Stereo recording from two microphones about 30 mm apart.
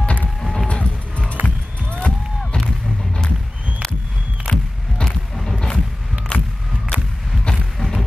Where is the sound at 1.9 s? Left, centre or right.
Left.